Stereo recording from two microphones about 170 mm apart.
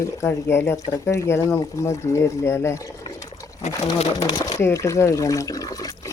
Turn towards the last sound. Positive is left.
turn(degrees=20)  # may be behind; listen again after turning